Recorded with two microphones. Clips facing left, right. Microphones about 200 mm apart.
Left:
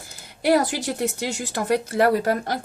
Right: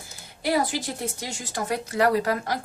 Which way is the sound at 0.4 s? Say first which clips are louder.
Left 5 dB; 75° left (ahead or behind).